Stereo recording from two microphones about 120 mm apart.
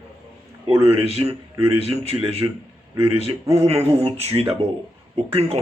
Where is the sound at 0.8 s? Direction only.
55° right (ahead or behind).